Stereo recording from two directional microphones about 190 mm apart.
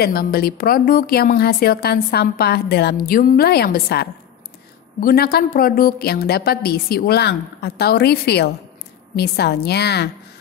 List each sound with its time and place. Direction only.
0.0 s a woman's voice: 50° left (ahead or behind)